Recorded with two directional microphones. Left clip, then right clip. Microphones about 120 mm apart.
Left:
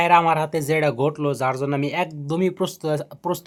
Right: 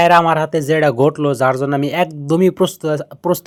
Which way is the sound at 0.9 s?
45° right (ahead or behind).